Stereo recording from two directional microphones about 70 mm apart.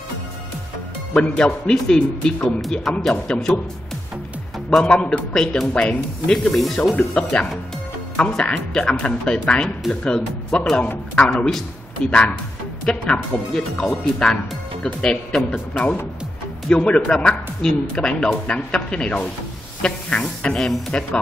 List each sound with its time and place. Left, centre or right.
1.1 s speech: centre
4.6 s speech: centre
12.0 s speech: centre